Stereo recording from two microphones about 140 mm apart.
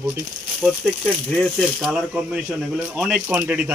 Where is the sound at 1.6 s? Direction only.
Centre (ahead or behind).